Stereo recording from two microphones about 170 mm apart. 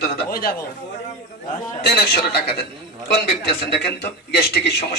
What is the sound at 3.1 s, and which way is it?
A man's voice, 70° left (ahead or behind).